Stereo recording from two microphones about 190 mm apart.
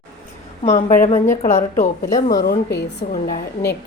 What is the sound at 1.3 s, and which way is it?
A woman's voice, 35° left (ahead or behind).